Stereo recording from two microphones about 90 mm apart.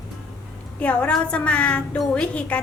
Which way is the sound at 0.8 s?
15° left (ahead or behind).